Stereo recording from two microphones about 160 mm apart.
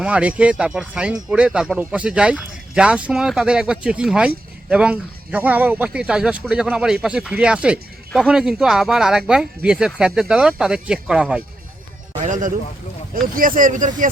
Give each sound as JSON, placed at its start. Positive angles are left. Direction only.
{"t": 0.0, "sound": "speech", "side_deg": -10}
{"t": 12.2, "sound": "a man's voice", "side_deg": -50}